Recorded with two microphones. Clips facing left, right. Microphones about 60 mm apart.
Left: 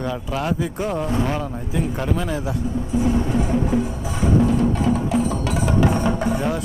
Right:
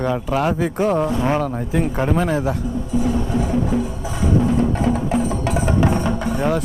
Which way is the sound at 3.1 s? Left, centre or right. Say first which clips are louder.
Even; left.